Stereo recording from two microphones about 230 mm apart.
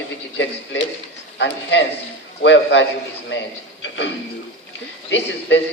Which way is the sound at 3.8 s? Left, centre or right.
Left.